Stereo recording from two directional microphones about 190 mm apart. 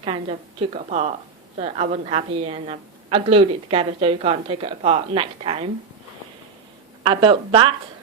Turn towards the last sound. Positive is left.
turn(degrees=-25)  # may be behind; listen again after turning